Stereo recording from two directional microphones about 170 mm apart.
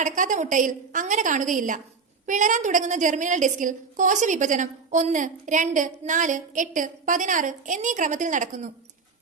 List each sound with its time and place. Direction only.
0.0 s a woman's voice: 50° right (ahead or behind)